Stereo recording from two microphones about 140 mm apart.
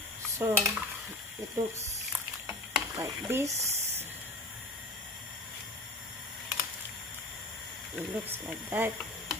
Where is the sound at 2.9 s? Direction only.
20° right (ahead or behind).